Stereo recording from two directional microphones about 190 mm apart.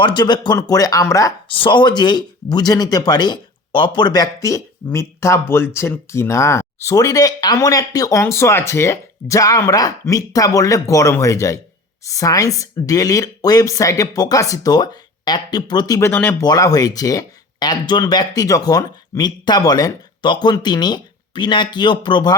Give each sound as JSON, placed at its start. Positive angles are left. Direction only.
{"t": 0.0, "sound": "speech", "side_deg": 25}